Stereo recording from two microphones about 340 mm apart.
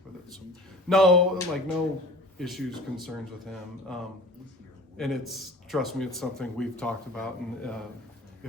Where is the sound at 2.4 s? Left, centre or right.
Centre.